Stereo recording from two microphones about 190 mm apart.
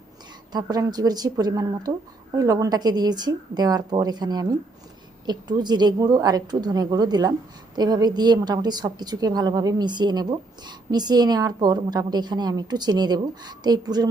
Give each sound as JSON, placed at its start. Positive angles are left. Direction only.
{"t": 0.5, "sound": "a woman's voice", "side_deg": -20}